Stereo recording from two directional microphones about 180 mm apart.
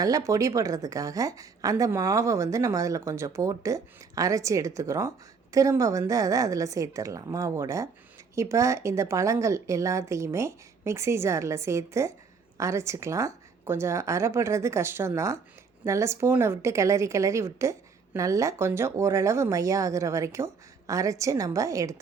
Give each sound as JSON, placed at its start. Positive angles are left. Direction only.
{"t": 0.0, "sound": "a woman's voice", "side_deg": -20}